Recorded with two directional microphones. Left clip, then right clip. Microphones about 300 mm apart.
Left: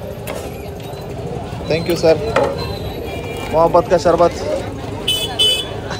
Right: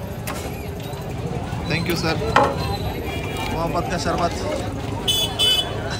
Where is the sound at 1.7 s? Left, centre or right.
Centre.